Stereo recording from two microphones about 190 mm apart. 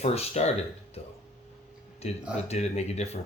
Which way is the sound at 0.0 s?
35° left (ahead or behind).